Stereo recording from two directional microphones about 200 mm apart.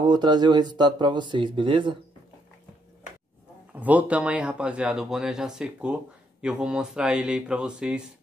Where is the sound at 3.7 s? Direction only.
5° right (ahead or behind).